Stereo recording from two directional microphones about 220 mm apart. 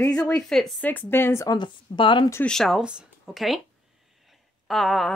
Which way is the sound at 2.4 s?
Centre (ahead or behind).